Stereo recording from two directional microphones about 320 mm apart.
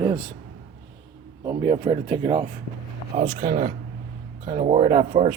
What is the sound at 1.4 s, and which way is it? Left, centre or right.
Speech, centre.